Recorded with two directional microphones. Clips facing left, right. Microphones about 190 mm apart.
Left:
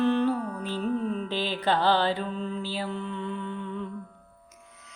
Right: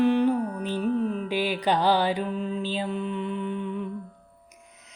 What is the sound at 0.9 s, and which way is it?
Mantra, 40° right (ahead or behind).